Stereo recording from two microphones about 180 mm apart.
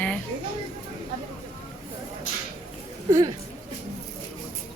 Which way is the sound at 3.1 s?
25° right (ahead or behind).